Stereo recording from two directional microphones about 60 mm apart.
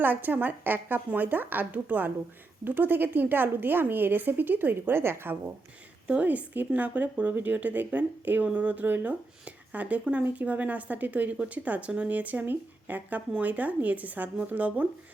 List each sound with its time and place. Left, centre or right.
0.0 s a woman's voice: right
6.1 s speech: right